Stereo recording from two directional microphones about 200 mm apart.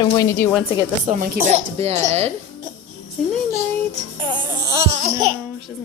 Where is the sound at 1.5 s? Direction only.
30° right (ahead or behind).